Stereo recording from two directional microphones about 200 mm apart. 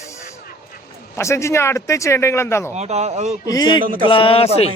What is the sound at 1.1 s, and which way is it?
Speech, 15° left (ahead or behind).